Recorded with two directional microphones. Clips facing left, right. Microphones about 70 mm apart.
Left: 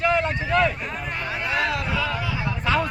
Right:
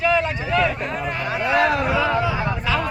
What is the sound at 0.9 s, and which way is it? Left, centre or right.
Speech, centre.